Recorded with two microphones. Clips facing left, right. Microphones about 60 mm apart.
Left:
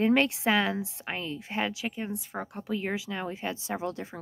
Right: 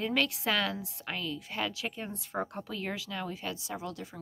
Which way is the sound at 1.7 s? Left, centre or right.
Centre.